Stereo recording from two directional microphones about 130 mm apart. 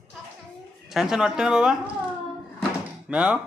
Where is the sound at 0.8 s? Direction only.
Centre (ahead or behind).